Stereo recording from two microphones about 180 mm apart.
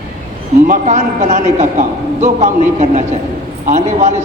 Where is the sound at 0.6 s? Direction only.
45° right (ahead or behind).